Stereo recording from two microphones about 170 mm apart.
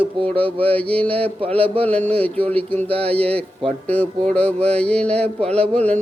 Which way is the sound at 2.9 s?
35° right (ahead or behind).